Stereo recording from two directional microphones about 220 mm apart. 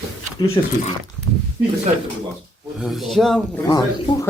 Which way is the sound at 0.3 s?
25° left (ahead or behind).